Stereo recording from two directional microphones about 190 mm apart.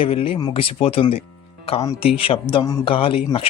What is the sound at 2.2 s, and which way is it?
Speech, 30° left (ahead or behind).